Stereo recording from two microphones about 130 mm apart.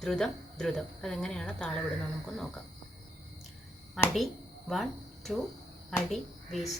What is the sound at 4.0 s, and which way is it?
A woman's voice, centre (ahead or behind).